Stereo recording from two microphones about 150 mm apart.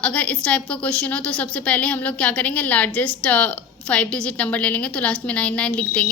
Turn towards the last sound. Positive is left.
turn(degrees=5)  # may be behind; listen again after turning